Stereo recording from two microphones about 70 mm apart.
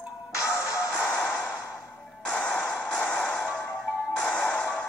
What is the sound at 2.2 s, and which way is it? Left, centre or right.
Music, centre.